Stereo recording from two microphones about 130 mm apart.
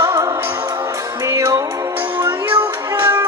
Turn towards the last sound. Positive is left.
turn(degrees=-25)  # may be behind; listen again after turning